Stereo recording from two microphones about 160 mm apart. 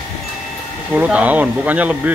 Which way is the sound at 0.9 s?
5° right (ahead or behind).